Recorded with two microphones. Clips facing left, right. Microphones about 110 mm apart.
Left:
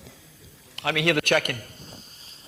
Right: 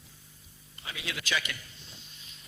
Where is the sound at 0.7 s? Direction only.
75° left (ahead or behind); by 2.4 s 40° left (ahead or behind).